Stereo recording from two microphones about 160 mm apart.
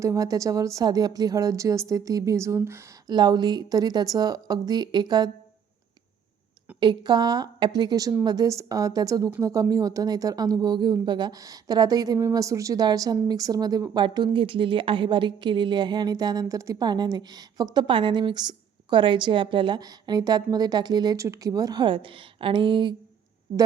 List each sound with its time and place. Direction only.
0.0 s speech: 20° right (ahead or behind)
3.1 s speech: 25° right (ahead or behind)
6.7 s speech: 25° right (ahead or behind)